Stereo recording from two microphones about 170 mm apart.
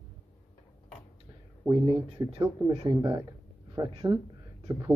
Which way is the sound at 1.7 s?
30° right (ahead or behind).